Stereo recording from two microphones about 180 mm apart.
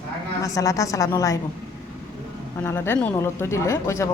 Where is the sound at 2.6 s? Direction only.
15° left (ahead or behind).